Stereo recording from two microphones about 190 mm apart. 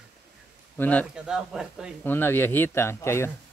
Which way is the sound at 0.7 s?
10° left (ahead or behind).